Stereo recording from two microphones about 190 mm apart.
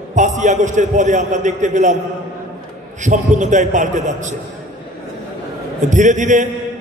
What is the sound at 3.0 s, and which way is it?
A man's voice, 40° right (ahead or behind).